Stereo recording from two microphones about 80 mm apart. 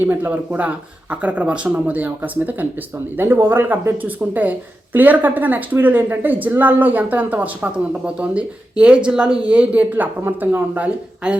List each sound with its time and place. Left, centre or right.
0.0 s a woman's voice: right
3.2 s a woman's voice: right; by 11.3 s centre